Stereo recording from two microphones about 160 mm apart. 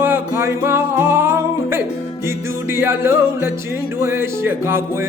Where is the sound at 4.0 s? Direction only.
15° right (ahead or behind).